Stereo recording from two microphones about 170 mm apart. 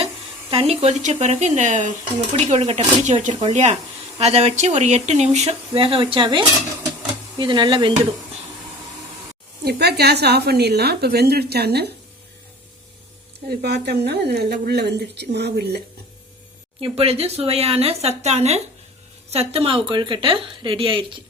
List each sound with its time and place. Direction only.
0.5 s speech: 35° right (ahead or behind)
9.6 s a woman's voice: 70° right (ahead or behind)
13.5 s a woman's voice: 70° right (ahead or behind)
16.8 s speech: 35° right (ahead or behind)